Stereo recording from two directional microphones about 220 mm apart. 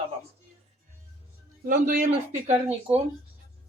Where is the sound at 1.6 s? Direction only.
40° right (ahead or behind).